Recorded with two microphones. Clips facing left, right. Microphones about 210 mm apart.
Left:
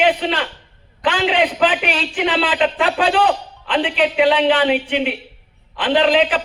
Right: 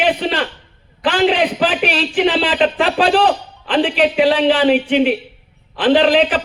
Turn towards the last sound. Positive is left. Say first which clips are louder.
# right 3 dB
turn(degrees=-35)  # may be behind; listen again after turning